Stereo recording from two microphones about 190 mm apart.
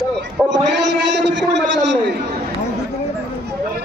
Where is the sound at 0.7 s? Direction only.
65° right (ahead or behind).